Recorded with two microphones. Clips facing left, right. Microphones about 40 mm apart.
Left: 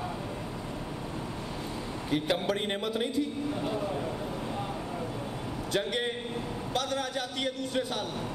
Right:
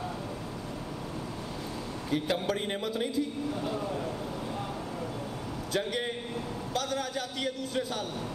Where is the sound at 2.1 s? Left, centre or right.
Left.